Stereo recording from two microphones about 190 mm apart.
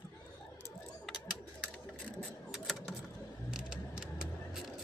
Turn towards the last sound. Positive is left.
turn(degrees=-5)  # may be behind; listen again after turning